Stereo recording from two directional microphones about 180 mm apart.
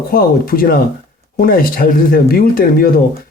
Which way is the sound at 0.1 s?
55° left (ahead or behind).